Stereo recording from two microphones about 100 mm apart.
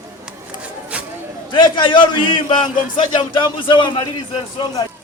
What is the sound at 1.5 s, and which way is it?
A man's voice, 50° left (ahead or behind).